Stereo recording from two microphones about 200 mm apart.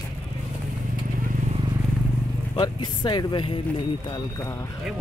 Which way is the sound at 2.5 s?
20° left (ahead or behind).